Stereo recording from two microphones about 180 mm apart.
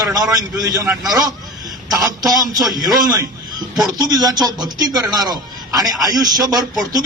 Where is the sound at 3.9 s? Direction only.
20° right (ahead or behind).